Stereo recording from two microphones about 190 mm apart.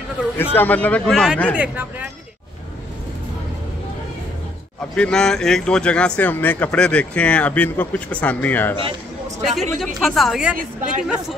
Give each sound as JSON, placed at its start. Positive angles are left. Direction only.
{"t": 0.6, "sound": "speech", "side_deg": 10}
{"t": 1.6, "sound": "speech", "side_deg": -10}
{"t": 4.9, "sound": "speech", "side_deg": 5}
{"t": 9.5, "sound": "speech", "side_deg": 0}
{"t": 10.6, "sound": "speech", "side_deg": -45}